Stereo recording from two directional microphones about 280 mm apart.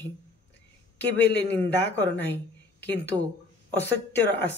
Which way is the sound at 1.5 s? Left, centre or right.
Centre.